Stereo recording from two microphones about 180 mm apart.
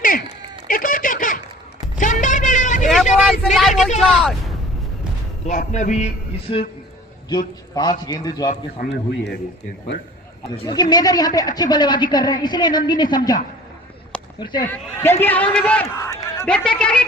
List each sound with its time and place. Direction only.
0.7 s a sound: 50° left (ahead or behind)
3.2 s a sound: centre (ahead or behind)
4.0 s speech: centre (ahead or behind)
5.5 s a man's voice: 45° left (ahead or behind); by 8.4 s 20° left (ahead or behind)
8.4 s a man's voice: 60° left (ahead or behind)
10.6 s a woman's voice: 25° left (ahead or behind)
14.7 s a woman's voice: 10° left (ahead or behind)
15.5 s a sound: 5° left (ahead or behind)
16.5 s a woman's voice: 5° left (ahead or behind)